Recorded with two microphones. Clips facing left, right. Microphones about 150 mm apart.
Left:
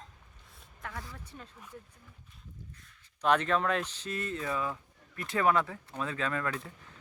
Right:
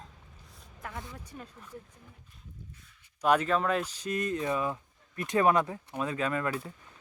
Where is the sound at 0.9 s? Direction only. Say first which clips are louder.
Right 2 dB; 20° right (ahead or behind).